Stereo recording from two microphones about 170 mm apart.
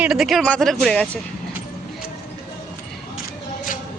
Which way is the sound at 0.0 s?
5° right (ahead or behind).